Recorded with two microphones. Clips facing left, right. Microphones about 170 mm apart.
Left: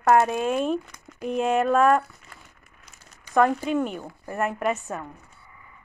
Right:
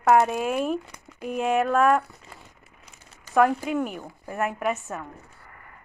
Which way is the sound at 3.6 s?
5° right (ahead or behind).